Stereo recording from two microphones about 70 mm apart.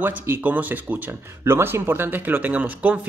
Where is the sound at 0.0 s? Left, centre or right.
Right.